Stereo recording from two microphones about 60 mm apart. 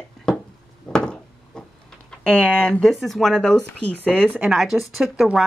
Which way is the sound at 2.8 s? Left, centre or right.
Centre.